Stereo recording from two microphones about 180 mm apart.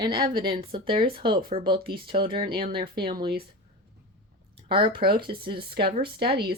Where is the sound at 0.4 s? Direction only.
30° right (ahead or behind).